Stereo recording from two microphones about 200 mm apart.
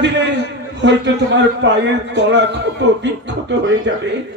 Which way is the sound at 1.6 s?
60° right (ahead or behind).